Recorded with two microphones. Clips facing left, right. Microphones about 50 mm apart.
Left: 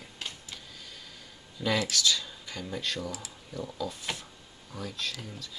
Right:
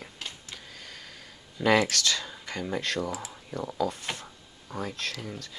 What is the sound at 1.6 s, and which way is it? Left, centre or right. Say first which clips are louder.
Speech: right 6 dB; right.